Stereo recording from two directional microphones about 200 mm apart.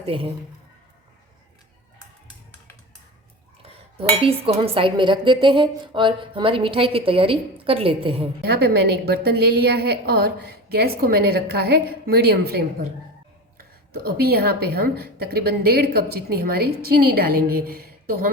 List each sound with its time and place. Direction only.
0.0 s speech: 25° right (ahead or behind)
3.9 s speech: 30° right (ahead or behind)
8.4 s a woman's voice: 50° right (ahead or behind)
13.9 s a woman's voice: 50° right (ahead or behind)